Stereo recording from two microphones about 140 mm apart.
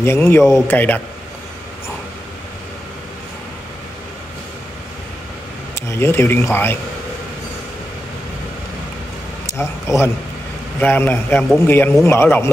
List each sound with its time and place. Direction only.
0.0 s a man's voice: 20° left (ahead or behind)
5.8 s a man's voice: 20° left (ahead or behind)
9.5 s a man's voice: 20° left (ahead or behind)